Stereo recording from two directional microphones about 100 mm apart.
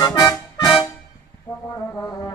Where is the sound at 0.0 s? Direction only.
35° left (ahead or behind).